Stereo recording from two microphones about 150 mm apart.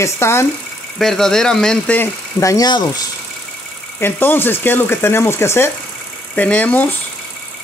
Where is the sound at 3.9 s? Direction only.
15° left (ahead or behind).